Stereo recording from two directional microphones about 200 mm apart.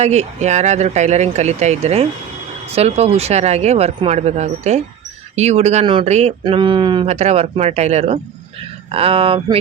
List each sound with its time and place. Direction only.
0.0 s speech: 35° right (ahead or behind)
6.4 s speech: 25° right (ahead or behind)